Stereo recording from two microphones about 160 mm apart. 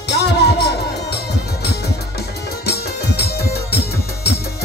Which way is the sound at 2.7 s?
85° left.